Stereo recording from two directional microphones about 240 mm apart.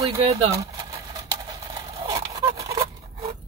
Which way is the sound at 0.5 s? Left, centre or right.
Centre.